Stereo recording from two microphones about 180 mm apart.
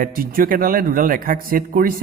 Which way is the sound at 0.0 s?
55° right (ahead or behind).